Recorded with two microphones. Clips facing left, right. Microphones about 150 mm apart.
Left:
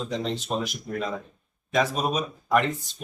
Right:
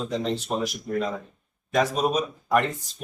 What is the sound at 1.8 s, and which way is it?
Speech, centre (ahead or behind).